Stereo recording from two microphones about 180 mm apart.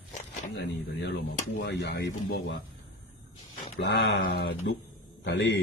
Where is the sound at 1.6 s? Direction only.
75° left (ahead or behind).